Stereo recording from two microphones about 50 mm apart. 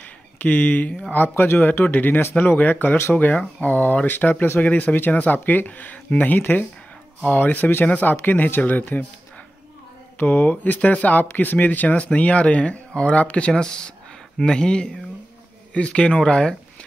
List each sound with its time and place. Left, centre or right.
0.4 s speech: left
1.1 s speech: left
10.1 s speech: left
13.5 s speech: centre